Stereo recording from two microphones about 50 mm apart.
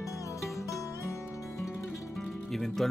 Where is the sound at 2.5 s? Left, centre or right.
Centre.